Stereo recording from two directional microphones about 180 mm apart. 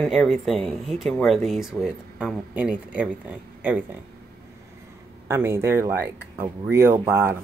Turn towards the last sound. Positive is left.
turn(degrees=-15)  # may be behind; listen again after turning